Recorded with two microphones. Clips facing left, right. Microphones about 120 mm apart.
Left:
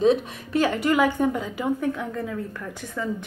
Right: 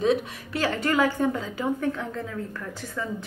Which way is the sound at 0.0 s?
25° left (ahead or behind).